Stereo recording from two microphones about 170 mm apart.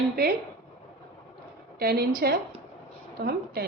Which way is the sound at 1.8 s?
65° right (ahead or behind).